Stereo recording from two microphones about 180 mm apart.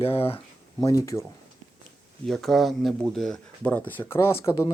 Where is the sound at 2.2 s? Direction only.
Centre (ahead or behind).